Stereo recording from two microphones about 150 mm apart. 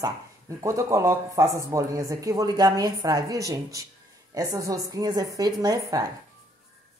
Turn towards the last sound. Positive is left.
turn(degrees=-25)  # may be behind; listen again after turning